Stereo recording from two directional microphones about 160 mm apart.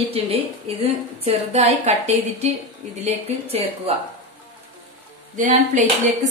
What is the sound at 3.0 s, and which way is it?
Speech, 40° right (ahead or behind).